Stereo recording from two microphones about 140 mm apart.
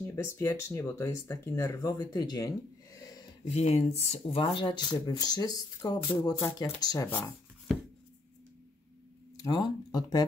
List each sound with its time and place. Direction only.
0.0 s speech: 20° left (ahead or behind)
3.5 s speech: 50° left (ahead or behind); by 7.1 s 30° left (ahead or behind)
7.1 s a sound: 15° left (ahead or behind)
9.4 s speech: 25° left (ahead or behind)